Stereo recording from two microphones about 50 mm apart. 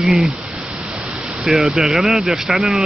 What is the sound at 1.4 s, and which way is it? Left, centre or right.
Speech, centre.